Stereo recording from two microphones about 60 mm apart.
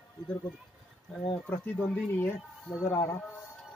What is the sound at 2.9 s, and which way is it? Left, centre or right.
Speech, left.